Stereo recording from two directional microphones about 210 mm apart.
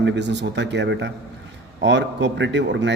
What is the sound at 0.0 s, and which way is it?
A man's voice, 55° right (ahead or behind).